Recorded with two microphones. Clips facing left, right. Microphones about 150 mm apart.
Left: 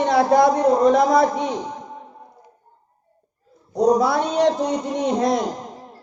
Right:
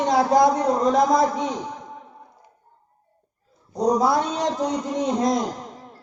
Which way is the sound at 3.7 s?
65° left (ahead or behind).